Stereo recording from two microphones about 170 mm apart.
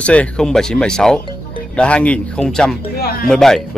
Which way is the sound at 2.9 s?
65° left (ahead or behind).